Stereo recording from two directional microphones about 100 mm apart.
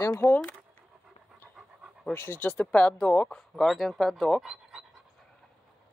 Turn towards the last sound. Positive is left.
turn(degrees=-5)  # may be behind; listen again after turning